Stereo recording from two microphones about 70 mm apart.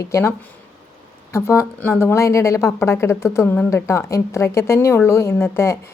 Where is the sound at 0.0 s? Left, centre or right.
Left.